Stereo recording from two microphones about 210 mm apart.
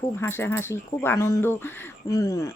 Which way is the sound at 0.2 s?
10° left (ahead or behind).